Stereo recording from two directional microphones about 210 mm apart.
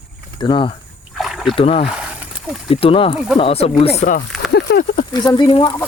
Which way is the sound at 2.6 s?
25° left (ahead or behind).